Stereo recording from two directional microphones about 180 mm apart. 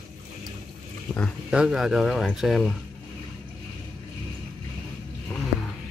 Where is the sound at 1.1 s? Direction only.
5° left (ahead or behind).